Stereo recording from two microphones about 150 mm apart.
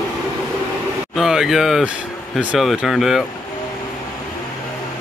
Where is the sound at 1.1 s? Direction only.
5° right (ahead or behind).